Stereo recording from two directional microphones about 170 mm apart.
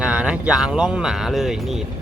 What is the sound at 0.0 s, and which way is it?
Speech, 5° right (ahead or behind).